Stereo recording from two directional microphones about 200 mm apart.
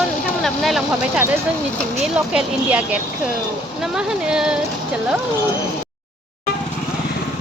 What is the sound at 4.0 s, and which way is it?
Speech, 5° right (ahead or behind).